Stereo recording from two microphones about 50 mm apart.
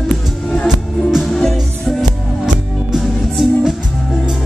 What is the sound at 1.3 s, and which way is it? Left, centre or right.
Music, centre.